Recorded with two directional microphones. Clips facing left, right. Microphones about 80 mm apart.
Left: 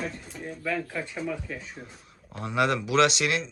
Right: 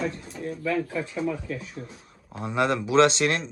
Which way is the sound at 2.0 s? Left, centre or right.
Right.